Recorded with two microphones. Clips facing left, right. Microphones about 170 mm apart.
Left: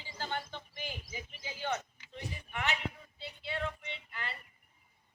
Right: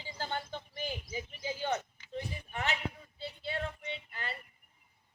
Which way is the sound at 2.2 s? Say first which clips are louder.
Right 2 dB; 35° right (ahead or behind).